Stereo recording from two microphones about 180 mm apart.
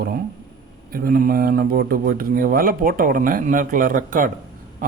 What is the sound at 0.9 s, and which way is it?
Speech, 55° right (ahead or behind).